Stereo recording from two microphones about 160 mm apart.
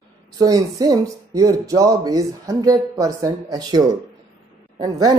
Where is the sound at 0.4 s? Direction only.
20° right (ahead or behind).